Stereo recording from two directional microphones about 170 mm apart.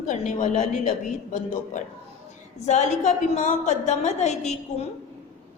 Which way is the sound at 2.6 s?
45° left (ahead or behind).